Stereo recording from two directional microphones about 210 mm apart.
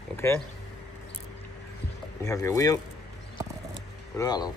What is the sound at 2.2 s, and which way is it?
Speech, 15° left (ahead or behind).